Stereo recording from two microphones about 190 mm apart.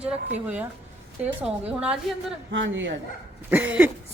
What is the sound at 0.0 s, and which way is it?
A man's voice, 5° right (ahead or behind).